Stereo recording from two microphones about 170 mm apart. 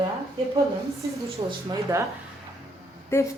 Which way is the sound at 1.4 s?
25° right (ahead or behind).